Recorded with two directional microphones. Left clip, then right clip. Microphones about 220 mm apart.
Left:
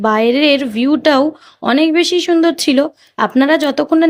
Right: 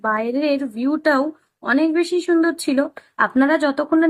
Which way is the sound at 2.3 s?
35° left (ahead or behind).